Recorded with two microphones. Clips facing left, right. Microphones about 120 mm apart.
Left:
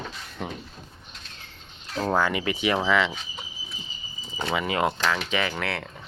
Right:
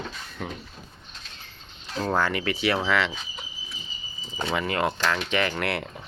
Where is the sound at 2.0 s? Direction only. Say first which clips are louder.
Left 1 dB; 10° left (ahead or behind).